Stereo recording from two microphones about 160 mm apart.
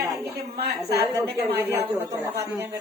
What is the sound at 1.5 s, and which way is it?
Speech, 15° right (ahead or behind).